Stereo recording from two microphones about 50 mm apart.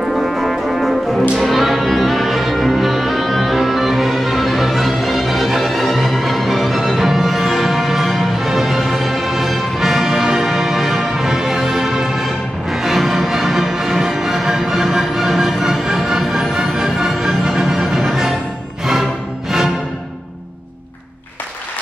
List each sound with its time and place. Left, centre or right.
0.1 s brass instrument: centre
1.4 s music: centre